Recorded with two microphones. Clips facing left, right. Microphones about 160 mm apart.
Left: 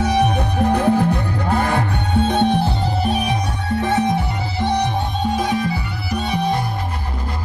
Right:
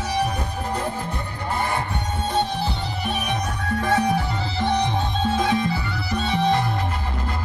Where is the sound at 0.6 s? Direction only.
75° left (ahead or behind).